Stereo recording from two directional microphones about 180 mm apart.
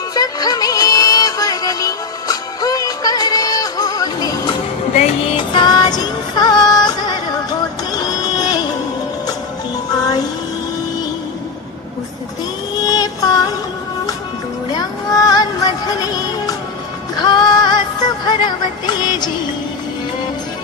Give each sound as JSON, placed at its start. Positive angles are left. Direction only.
{"t": 0.1, "sound": "music", "side_deg": 20}
{"t": 8.0, "sound": "a sound", "side_deg": 20}
{"t": 9.9, "sound": "music", "side_deg": 20}
{"t": 12.8, "sound": "music", "side_deg": 20}
{"t": 14.7, "sound": "music", "side_deg": 20}